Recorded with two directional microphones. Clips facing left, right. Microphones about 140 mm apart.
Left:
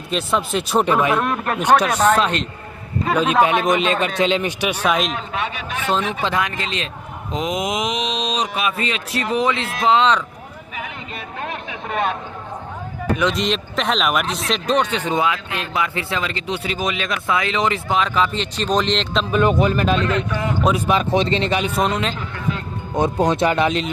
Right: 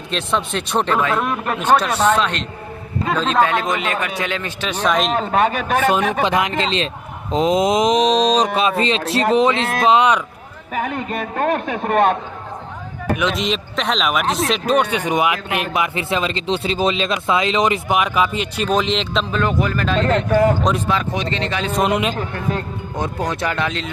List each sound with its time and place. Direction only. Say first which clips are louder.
0.1 s speech: left 1 dB; 5° left (ahead or behind)
1.2 s speech: even; centre (ahead or behind)
5.1 s a man's voice: right 9 dB; 45° right (ahead or behind)
6.2 s a man's voice: right 4 dB; 20° right (ahead or behind)
10.8 s a man's voice: right 10 dB; 50° right (ahead or behind)
13.2 s speech: left 1 dB; centre (ahead or behind)
14.7 s speech: right 1 dB; 10° right (ahead or behind)
19.3 s speech: left 6 dB; 20° left (ahead or behind)
20.0 s a man's voice: right 6 dB; 45° right (ahead or behind)
20.8 s speech: left 3 dB; 20° left (ahead or behind)
21.8 s speech: right 6 dB; 10° right (ahead or behind)
22.1 s a man's voice: right 3 dB; 45° right (ahead or behind)
23.0 s speech: left 6 dB; 20° left (ahead or behind)